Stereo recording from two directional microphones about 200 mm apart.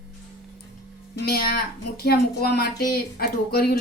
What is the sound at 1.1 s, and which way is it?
A woman's voice, 50° left (ahead or behind).